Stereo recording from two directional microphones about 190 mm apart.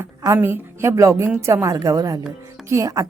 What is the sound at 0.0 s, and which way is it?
Speech, 15° right (ahead or behind).